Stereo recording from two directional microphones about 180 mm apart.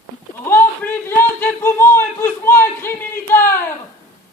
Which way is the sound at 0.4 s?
10° left (ahead or behind).